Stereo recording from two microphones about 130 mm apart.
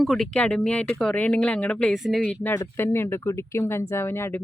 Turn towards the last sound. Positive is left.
turn(degrees=20)  # may be behind; listen again after turning